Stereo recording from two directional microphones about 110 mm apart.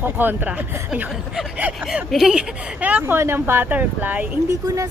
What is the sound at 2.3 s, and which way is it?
Speech, 15° right (ahead or behind).